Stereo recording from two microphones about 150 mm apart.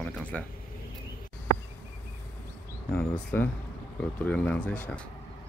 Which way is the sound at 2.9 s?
10° left (ahead or behind).